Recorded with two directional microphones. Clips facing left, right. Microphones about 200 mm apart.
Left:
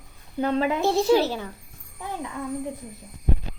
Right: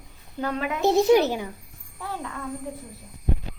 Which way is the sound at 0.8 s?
20° right (ahead or behind).